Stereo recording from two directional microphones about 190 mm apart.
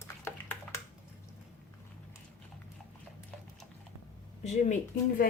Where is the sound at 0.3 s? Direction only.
15° left (ahead or behind).